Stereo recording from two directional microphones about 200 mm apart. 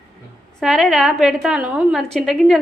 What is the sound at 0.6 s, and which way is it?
A woman's voice, centre (ahead or behind).